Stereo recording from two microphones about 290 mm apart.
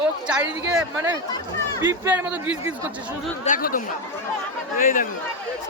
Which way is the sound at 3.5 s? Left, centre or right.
Left.